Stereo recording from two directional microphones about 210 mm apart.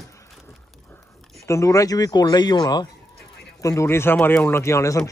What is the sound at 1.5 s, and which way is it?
A man's voice, 15° left (ahead or behind).